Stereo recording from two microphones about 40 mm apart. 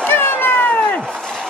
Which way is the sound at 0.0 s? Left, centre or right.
Left.